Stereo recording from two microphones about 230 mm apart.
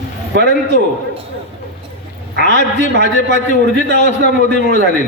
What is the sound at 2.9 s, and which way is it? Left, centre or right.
A man's voice, right.